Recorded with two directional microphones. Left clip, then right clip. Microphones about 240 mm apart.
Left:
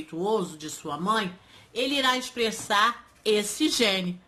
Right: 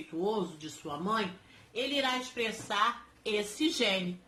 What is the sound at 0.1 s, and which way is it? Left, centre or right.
Speech, left.